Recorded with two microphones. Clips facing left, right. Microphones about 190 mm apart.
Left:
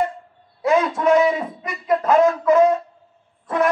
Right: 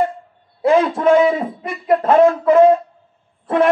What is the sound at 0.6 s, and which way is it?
Speech, 30° right (ahead or behind).